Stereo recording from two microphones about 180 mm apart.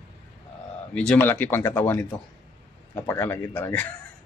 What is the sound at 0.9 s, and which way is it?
A man's voice, 5° left (ahead or behind).